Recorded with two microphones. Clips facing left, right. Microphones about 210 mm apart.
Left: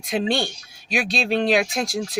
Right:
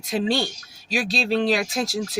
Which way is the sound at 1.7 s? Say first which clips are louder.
Even; 5° right (ahead or behind).